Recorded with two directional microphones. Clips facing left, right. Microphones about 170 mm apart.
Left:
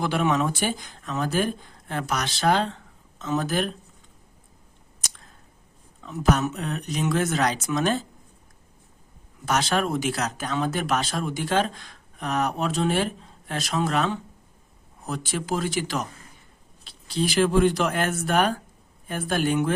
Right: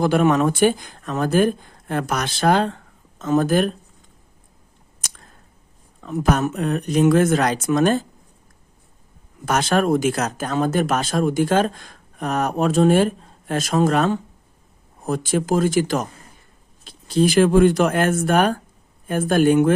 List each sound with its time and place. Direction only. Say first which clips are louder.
0.0 s speech: right 7 dB; 45° right (ahead or behind)
6.0 s speech: right 3 dB; 50° right (ahead or behind)
9.5 s speech: right 6 dB; 50° right (ahead or behind)